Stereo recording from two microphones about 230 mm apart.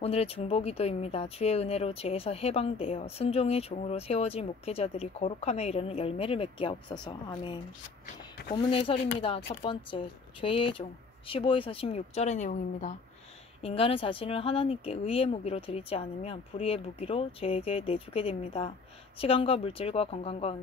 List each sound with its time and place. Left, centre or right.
0.0 s speech: left